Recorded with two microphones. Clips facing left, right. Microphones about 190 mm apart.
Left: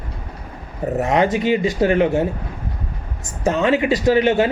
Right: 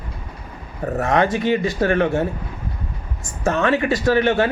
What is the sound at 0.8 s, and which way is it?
Speech, 20° left (ahead or behind).